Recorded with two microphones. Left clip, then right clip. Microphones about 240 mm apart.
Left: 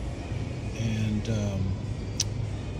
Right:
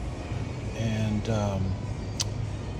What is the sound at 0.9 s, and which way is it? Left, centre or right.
Speech, centre.